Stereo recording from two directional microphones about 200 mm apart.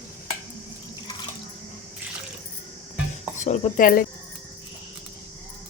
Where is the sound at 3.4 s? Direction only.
40° left (ahead or behind).